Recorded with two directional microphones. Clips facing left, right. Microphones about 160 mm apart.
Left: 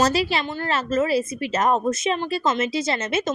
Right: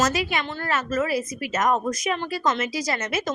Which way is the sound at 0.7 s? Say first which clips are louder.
Left 3 dB; 30° left (ahead or behind).